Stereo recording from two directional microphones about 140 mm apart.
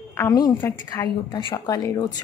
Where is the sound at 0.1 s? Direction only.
25° left (ahead or behind).